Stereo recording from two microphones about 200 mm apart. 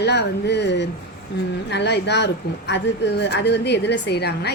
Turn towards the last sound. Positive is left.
turn(degrees=55)  # may be behind; listen again after turning